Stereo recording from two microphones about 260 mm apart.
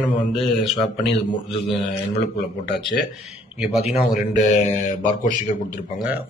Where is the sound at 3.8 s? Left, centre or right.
Left.